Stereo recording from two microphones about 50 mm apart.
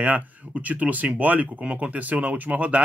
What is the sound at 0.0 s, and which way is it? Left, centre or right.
Speech, right.